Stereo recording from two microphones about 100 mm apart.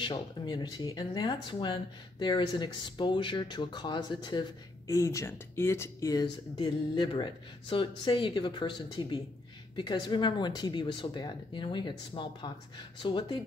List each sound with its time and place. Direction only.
0.0 s speech: 50° left (ahead or behind)
4.8 s speech: 30° left (ahead or behind)
6.6 s speech: 50° left (ahead or behind)